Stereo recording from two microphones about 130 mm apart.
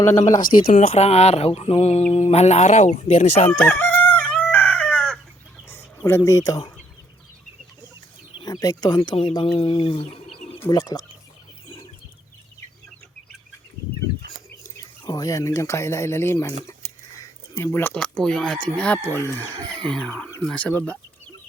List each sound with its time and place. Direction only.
0.0 s speech: 20° left (ahead or behind)
0.3 s speech: 85° left
0.9 s mantra: 55° left (ahead or behind)
3.8 s chicken: 15° left (ahead or behind)
5.6 s bird: 20° left (ahead or behind)
8.4 s speech: 30° left (ahead or behind); by 10.3 s 50° left (ahead or behind)
10.7 s speech: 30° left (ahead or behind)
14.6 s speech: 30° left (ahead or behind); by 20.9 s 10° left (ahead or behind)